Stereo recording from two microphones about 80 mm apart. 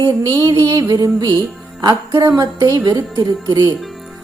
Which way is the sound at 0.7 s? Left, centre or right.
Right.